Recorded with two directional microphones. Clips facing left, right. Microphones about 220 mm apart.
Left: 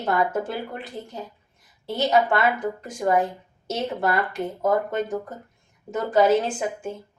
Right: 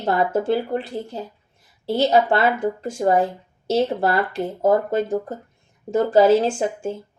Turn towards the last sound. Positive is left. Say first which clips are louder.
# right 5 dB
turn(degrees=-30)  # may be behind; listen again after turning